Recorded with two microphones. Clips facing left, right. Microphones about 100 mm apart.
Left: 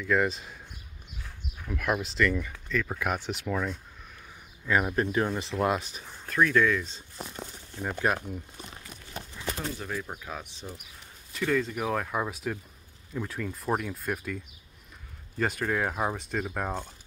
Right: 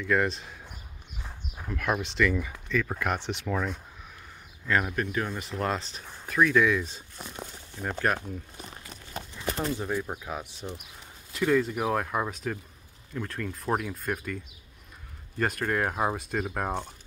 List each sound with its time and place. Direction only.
0.0 s speech: centre (ahead or behind)
1.7 s speech: 5° left (ahead or behind)
4.6 s speech: 10° left (ahead or behind)
4.9 s speech: 30° left (ahead or behind)
5.7 s speech: 10° left (ahead or behind)
6.2 s speech: 5° right (ahead or behind)
7.8 s speech: 5° left (ahead or behind)
9.8 s speech: 20° right (ahead or behind)